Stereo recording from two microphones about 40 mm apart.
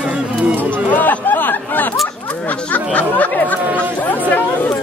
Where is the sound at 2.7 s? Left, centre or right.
Left.